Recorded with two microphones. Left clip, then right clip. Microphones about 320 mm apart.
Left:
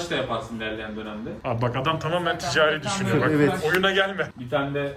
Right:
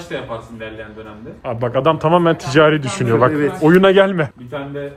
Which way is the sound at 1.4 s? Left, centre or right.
Centre.